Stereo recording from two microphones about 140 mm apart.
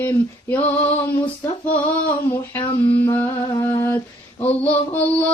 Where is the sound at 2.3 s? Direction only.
15° left (ahead or behind).